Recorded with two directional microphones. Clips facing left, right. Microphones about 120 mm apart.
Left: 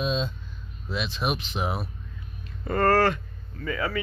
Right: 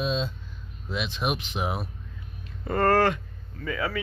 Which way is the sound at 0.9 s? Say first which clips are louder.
Even; 15° right (ahead or behind).